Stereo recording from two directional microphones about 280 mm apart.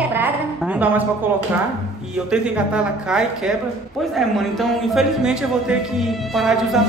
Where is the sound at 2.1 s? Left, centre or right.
Centre.